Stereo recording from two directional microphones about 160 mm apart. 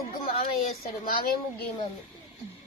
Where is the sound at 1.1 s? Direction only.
60° left (ahead or behind).